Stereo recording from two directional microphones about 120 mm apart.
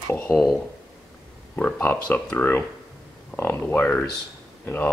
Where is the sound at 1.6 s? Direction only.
10° left (ahead or behind).